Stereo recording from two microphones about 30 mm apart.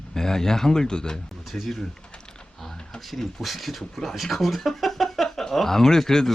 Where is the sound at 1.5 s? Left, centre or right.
Centre.